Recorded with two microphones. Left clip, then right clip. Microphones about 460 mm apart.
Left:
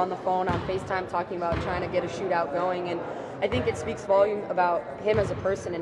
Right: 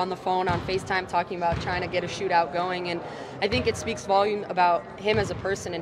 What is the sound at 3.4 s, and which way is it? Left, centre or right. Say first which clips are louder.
Speech: right 2 dB; right.